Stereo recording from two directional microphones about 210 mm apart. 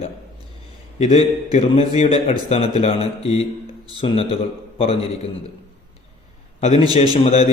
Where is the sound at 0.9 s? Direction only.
35° left (ahead or behind).